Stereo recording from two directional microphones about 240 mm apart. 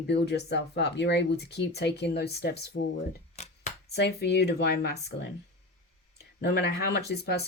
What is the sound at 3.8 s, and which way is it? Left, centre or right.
Speech, left.